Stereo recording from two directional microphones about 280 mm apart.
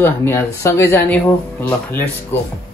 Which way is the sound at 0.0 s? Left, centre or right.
Centre.